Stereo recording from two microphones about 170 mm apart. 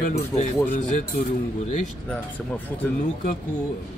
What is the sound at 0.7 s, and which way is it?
Speech, 50° left (ahead or behind).